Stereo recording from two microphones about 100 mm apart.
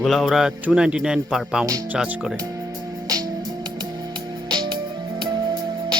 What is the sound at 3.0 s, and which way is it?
Music, 40° right (ahead or behind).